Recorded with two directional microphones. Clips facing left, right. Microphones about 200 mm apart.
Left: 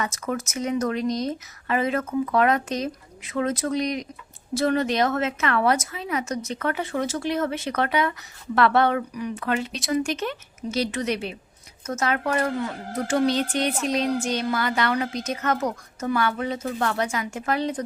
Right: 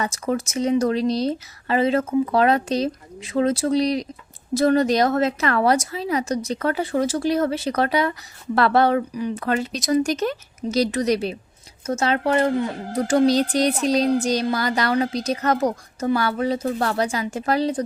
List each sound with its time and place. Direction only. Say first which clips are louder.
0.0 s a woman's voice: right 4 dB; 30° right (ahead or behind)
12.9 s a woman's voice: right 5 dB; 35° right (ahead or behind)